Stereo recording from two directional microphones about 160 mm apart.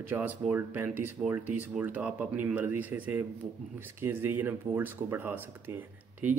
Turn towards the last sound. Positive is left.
turn(degrees=-10)  # may be behind; listen again after turning